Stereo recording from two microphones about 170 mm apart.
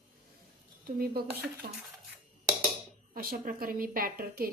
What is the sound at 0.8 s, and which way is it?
Speech, 65° right (ahead or behind).